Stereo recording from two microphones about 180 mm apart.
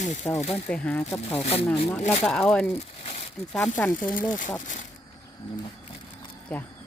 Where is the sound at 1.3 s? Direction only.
35° left (ahead or behind).